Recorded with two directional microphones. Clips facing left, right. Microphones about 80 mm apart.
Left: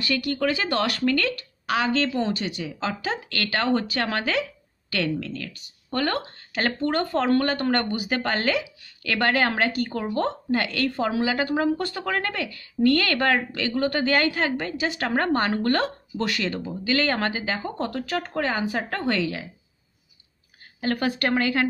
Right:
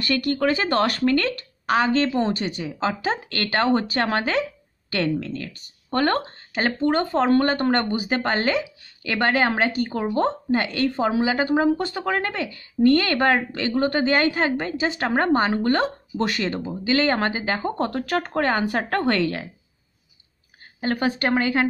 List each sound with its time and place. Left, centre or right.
0.0 s speech: right
6.5 s speech: centre
16.3 s speech: right
17.6 s speech: right
20.8 s speech: right